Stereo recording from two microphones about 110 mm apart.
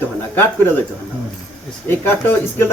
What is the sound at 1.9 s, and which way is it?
Speech, 20° left (ahead or behind).